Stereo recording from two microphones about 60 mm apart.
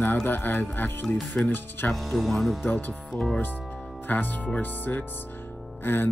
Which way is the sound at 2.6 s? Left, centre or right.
Left.